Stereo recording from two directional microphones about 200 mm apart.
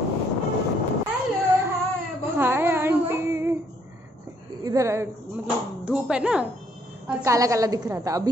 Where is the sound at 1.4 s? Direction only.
10° right (ahead or behind).